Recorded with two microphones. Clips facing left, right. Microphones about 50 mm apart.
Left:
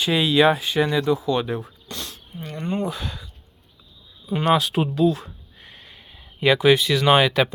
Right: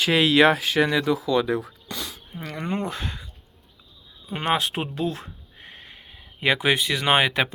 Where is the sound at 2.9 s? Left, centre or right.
Right.